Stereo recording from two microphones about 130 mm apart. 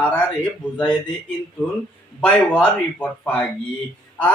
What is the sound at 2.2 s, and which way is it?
A man's voice, 10° left (ahead or behind).